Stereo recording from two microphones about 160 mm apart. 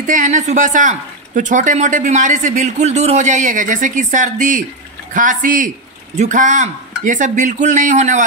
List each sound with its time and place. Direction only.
0.0 s speech: 55° right (ahead or behind)